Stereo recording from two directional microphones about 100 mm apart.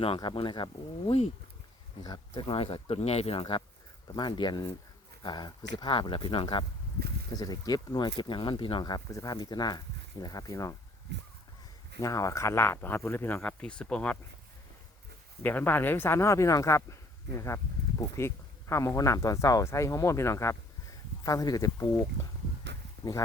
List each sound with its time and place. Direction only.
0.2 s speech: 55° left (ahead or behind); by 1.3 s 75° left (ahead or behind)
2.0 s speech: 55° left (ahead or behind); by 3.4 s 90° left
4.1 s speech: 45° left (ahead or behind)
7.3 s speech: 40° left (ahead or behind); by 8.8 s 55° left (ahead or behind)
8.8 s speech: 40° left (ahead or behind)
11.9 s speech: 35° left (ahead or behind); by 14.2 s 15° left (ahead or behind)
15.4 s speech: 20° left (ahead or behind)